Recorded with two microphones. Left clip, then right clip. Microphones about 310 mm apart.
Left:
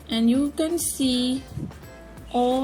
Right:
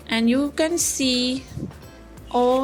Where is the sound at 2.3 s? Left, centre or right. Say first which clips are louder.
Right 3 dB; right.